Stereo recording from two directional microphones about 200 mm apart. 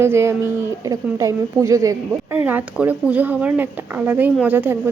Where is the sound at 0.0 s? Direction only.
15° right (ahead or behind).